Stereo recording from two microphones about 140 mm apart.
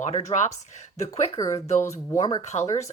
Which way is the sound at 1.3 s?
25° left (ahead or behind).